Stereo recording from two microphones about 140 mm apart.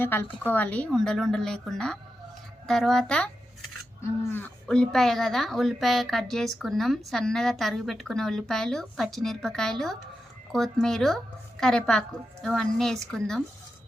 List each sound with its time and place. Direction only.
0.0 s a woman's voice: 15° left (ahead or behind)
4.0 s a woman's voice: 15° left (ahead or behind)